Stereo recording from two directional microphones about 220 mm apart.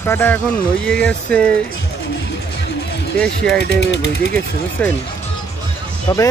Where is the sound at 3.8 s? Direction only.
50° left (ahead or behind).